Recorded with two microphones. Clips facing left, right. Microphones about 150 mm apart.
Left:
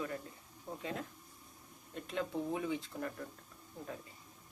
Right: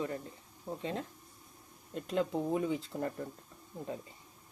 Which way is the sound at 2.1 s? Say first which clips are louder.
Right 5 dB; 40° right (ahead or behind).